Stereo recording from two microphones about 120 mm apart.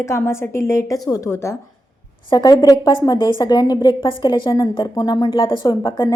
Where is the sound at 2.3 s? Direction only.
35° left (ahead or behind).